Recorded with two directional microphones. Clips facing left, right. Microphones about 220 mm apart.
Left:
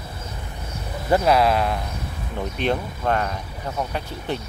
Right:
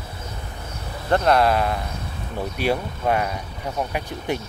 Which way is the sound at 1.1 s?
5° left (ahead or behind).